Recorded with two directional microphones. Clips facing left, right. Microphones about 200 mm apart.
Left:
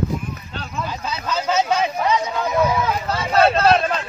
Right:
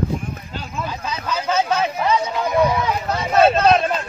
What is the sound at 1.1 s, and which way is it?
Speech, 10° right (ahead or behind).